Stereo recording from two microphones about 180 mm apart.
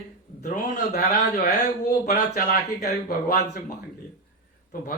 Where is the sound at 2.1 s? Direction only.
40° left (ahead or behind).